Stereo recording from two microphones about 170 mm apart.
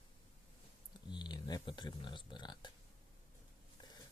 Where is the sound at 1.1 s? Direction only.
25° left (ahead or behind).